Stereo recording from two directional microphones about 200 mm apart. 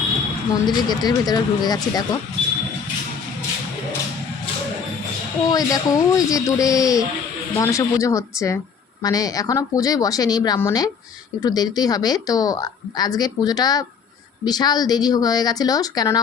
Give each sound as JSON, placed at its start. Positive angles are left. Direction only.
{"t": 0.9, "sound": "a woman's voice", "side_deg": 20}
{"t": 5.5, "sound": "a woman's voice", "side_deg": 20}